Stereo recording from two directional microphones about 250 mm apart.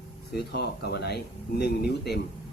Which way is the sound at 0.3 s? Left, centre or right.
Left.